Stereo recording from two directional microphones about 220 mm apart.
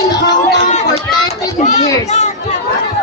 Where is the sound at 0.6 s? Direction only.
30° left (ahead or behind).